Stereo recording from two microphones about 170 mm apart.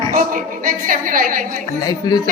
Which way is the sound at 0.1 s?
50° right (ahead or behind).